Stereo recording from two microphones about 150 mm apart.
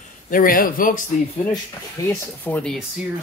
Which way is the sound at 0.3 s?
70° left (ahead or behind).